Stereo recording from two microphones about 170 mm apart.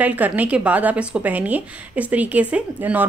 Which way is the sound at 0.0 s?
10° right (ahead or behind).